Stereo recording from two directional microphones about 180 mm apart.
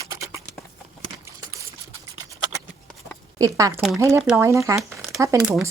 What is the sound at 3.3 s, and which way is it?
Speech, 20° right (ahead or behind).